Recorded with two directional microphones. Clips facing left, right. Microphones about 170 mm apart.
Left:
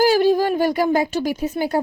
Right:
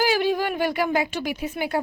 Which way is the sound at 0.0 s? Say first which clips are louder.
Left 6 dB; 40° left (ahead or behind).